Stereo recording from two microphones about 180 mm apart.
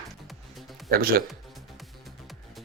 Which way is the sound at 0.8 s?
55° right (ahead or behind).